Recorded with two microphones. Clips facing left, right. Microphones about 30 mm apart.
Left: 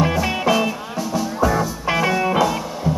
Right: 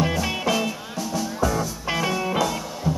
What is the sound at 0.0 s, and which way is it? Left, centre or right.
Music, centre.